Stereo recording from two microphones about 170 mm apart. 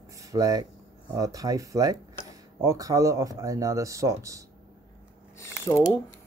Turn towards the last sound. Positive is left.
turn(degrees=15)  # may be behind; listen again after turning